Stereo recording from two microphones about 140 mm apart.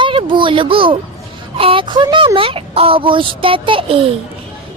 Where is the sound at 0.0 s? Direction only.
35° right (ahead or behind).